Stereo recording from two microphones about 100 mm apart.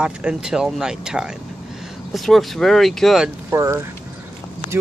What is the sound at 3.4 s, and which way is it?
Speech, 30° right (ahead or behind).